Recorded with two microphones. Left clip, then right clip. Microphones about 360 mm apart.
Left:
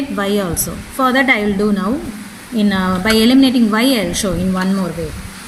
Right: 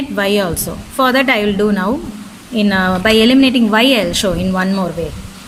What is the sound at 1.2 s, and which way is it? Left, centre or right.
Speech, right.